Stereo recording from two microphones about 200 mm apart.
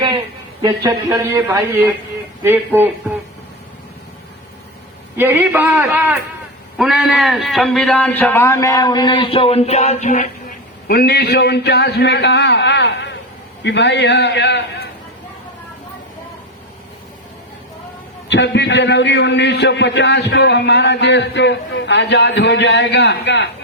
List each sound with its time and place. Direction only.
0.6 s speech: 15° right (ahead or behind)
5.1 s a man's voice: 10° right (ahead or behind); by 10.2 s 40° left (ahead or behind)
10.8 s a man's voice: 50° left (ahead or behind)
18.3 s a man's voice: 60° left (ahead or behind)